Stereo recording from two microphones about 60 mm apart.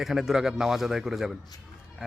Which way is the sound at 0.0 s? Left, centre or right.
Centre.